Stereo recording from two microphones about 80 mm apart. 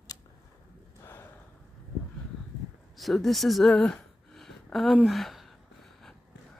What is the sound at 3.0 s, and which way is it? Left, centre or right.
Speech, centre.